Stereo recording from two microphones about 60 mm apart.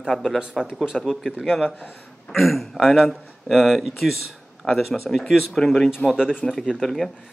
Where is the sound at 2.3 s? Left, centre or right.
Centre.